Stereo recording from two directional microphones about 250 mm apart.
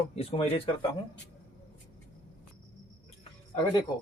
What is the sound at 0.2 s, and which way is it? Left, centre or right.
Speech, left.